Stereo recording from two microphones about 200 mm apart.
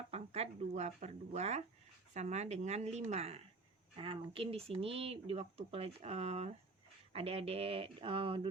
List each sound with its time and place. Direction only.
0.1 s speech: 35° right (ahead or behind)